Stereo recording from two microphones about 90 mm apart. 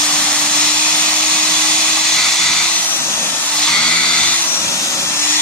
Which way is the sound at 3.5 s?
10° left (ahead or behind).